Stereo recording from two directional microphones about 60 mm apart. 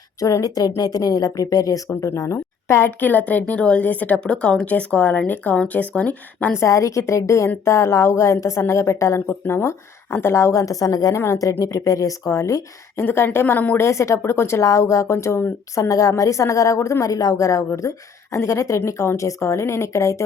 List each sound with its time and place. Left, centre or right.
0.2 s speech: left
2.0 s speech: left
2.3 s a woman's voice: left
3.0 s a woman's voice: left
6.6 s a woman's voice: left
13.0 s speech: left
13.7 s a woman's voice: left
14.6 s a woman's voice: left
15.7 s a woman's voice: left
18.3 s a woman's voice: left